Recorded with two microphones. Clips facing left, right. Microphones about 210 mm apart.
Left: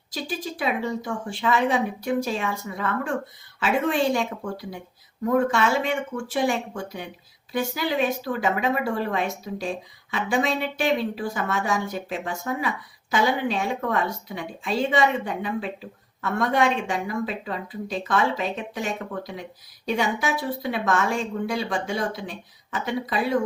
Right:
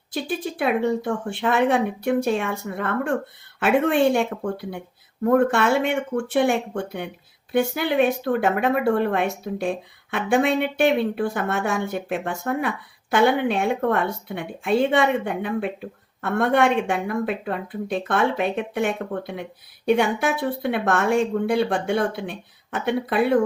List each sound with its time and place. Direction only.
0.1 s speech: 60° right (ahead or behind)